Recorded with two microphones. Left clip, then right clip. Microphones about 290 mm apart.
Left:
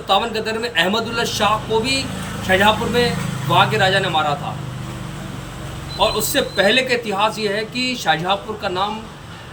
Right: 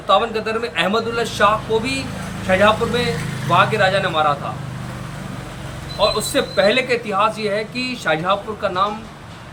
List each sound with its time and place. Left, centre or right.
0.1 s speech: centre
6.1 s speech: centre